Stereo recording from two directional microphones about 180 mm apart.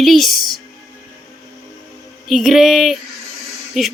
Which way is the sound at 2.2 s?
Centre (ahead or behind).